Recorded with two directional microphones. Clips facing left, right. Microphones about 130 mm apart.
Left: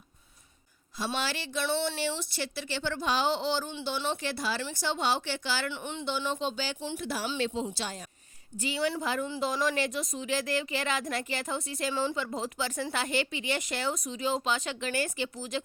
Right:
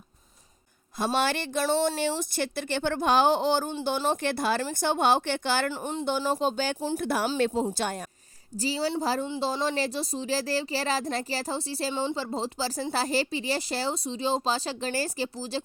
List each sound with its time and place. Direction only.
0.9 s speech: 50° right (ahead or behind)
7.0 s speech: 55° right (ahead or behind)
7.3 s speech: 45° right (ahead or behind)
8.5 s a woman's voice: 35° right (ahead or behind)